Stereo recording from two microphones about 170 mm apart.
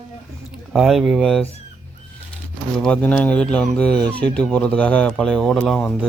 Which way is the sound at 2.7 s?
5° left (ahead or behind).